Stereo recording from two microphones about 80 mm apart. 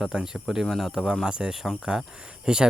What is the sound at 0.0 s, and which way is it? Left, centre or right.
Speech, centre.